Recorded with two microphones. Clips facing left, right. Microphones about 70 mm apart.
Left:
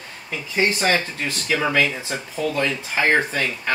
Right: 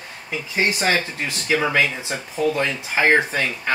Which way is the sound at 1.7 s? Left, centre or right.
Centre.